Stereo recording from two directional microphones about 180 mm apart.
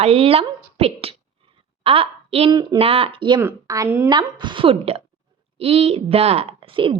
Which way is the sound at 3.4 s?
15° right (ahead or behind).